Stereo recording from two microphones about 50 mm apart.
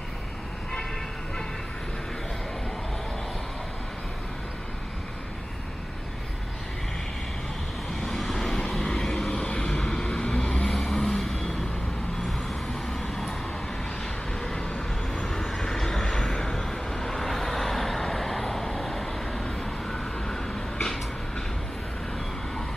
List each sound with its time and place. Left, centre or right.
8.0 s vehicle: centre; by 10.6 s left
10.6 s vehicle: centre
13.0 s vehicle: centre
14.4 s vehicle: centre